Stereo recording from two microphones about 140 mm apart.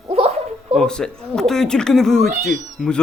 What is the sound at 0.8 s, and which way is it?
Speech, 5° left (ahead or behind).